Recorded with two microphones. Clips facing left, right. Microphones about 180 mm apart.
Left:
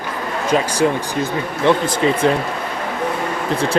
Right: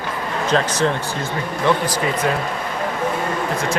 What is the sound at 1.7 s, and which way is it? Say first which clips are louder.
Speech: left 4 dB; 25° left (ahead or behind).